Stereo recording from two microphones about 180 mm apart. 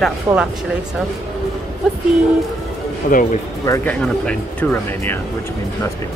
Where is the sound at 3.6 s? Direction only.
15° left (ahead or behind).